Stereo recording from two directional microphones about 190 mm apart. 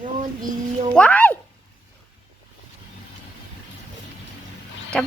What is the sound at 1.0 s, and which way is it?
Speech, 5° left (ahead or behind).